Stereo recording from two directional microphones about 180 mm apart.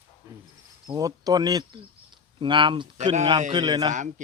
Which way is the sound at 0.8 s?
20° right (ahead or behind).